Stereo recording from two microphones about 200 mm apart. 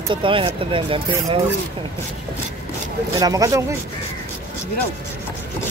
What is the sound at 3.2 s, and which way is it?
Speech, 15° right (ahead or behind).